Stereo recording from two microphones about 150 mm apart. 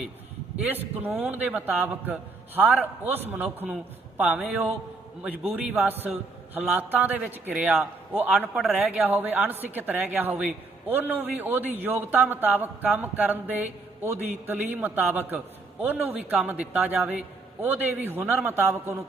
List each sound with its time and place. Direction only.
0.5 s a man's voice: 10° right (ahead or behind)